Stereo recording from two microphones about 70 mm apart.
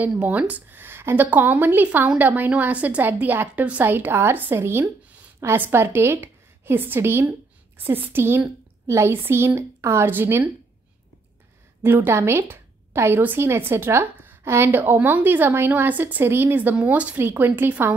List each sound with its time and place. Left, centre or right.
0.2 s a woman's voice: right
11.8 s a woman's voice: right
17.2 s a woman's voice: right